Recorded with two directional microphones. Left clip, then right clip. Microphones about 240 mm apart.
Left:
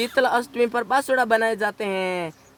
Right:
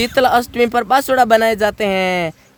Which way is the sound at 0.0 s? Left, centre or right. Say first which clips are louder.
Right 7 dB; right.